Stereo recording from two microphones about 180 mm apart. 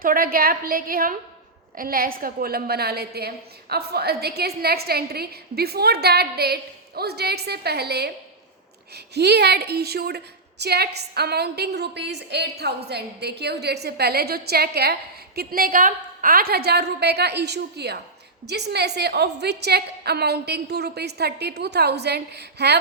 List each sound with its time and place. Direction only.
0.0 s a woman's voice: 55° right (ahead or behind)
9.1 s a woman's voice: 65° right (ahead or behind)